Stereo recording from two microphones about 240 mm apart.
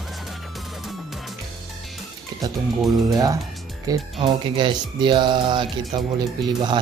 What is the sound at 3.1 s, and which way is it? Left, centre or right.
Speech, centre.